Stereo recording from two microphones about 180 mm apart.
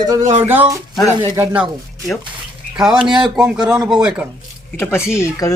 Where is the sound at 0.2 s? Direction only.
40° right (ahead or behind).